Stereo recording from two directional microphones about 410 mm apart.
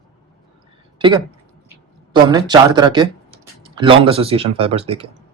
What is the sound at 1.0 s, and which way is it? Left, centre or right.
Speech, centre.